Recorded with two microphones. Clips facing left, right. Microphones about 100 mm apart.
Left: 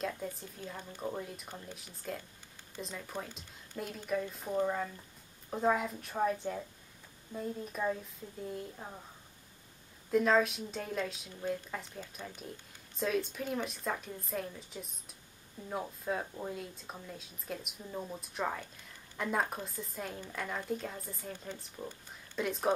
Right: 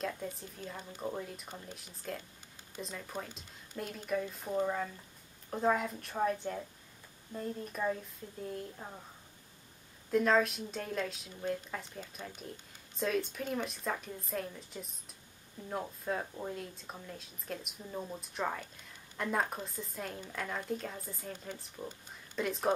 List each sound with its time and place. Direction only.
0.0 s speech: centre (ahead or behind)
10.1 s speech: centre (ahead or behind)